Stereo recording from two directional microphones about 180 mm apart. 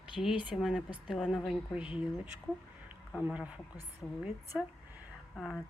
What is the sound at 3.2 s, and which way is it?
Speech, 5° right (ahead or behind).